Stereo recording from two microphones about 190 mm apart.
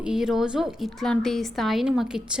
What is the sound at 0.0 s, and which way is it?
A woman's voice, 5° right (ahead or behind).